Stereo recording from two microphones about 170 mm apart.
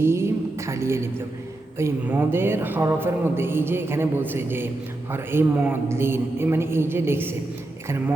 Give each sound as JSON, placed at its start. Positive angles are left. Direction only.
{"t": 0.0, "sound": "a woman's voice", "side_deg": -15}